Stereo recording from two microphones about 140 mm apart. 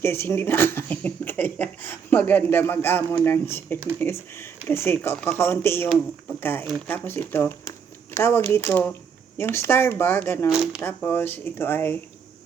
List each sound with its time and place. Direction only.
0.0 s speech: 15° left (ahead or behind)
10.5 s speech: 5° right (ahead or behind)
10.8 s speech: 15° left (ahead or behind)